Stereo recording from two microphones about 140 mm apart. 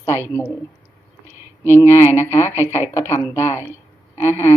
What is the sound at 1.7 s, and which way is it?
Speech, 15° left (ahead or behind).